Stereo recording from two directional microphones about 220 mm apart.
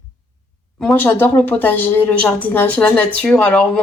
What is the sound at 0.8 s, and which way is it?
A woman's voice, 5° left (ahead or behind).